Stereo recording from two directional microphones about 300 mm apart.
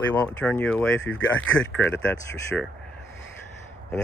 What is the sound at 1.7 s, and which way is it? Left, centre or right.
Speech, centre.